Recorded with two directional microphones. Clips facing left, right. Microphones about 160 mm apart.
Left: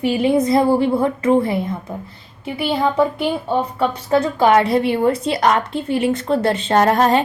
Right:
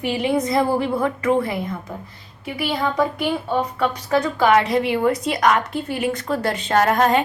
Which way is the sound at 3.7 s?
30° left (ahead or behind).